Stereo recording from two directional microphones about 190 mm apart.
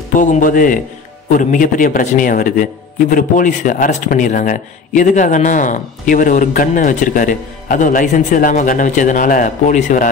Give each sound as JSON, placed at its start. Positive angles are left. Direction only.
{"t": 0.1, "sound": "a man's voice", "side_deg": 45}